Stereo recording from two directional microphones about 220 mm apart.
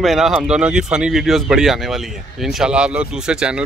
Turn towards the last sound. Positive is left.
turn(degrees=-5)  # may be behind; listen again after turning